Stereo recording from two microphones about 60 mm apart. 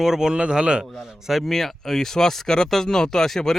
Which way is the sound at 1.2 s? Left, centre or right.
Centre.